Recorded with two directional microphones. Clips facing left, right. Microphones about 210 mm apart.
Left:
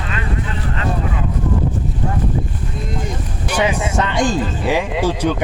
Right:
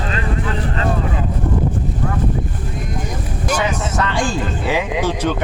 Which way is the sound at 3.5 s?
15° left (ahead or behind).